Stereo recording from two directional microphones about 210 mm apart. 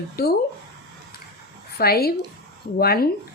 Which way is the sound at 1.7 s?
45° left (ahead or behind).